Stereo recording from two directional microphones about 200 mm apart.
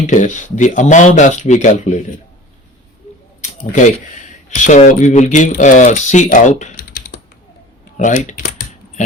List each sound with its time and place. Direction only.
0.1 s speech: 40° left (ahead or behind)
3.6 s speech: 40° left (ahead or behind)
7.9 s speech: 40° left (ahead or behind)